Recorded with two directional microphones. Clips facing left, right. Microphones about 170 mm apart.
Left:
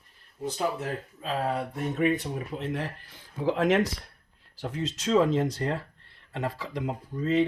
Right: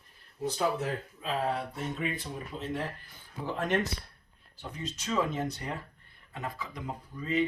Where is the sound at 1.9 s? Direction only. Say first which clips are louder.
Left 9 dB; 65° left (ahead or behind); by 6.9 s 90° left.